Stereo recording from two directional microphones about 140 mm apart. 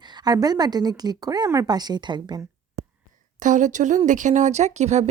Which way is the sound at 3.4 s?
65° right (ahead or behind).